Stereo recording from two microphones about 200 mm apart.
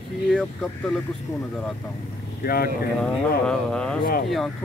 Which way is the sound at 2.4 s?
50° left (ahead or behind).